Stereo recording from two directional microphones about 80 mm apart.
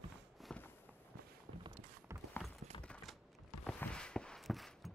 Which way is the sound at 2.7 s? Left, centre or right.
Left.